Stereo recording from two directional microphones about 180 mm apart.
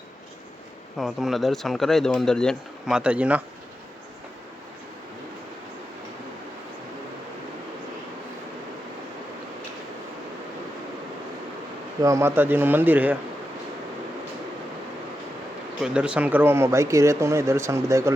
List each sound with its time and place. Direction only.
0.9 s speech: centre (ahead or behind)
12.0 s speech: 15° right (ahead or behind)
15.8 s speech: 5° right (ahead or behind)